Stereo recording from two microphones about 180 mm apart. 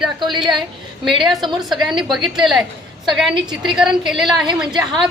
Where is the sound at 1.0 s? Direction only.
Centre (ahead or behind).